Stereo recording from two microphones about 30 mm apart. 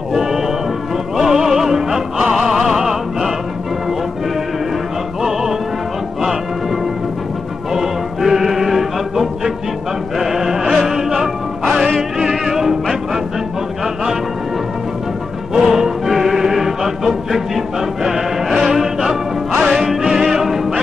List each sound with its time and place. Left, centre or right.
0.1 s music: centre
5.2 s music: centre
7.7 s music: centre
15.5 s music: centre